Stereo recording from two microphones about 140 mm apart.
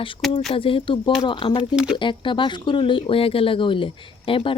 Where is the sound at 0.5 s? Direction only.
40° left (ahead or behind).